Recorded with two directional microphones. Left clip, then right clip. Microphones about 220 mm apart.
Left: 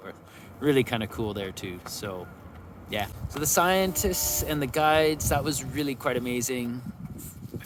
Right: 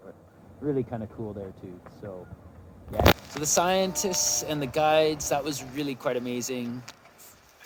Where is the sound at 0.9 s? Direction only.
40° left (ahead or behind).